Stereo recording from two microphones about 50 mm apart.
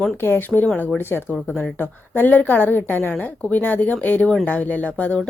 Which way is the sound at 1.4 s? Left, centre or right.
Left.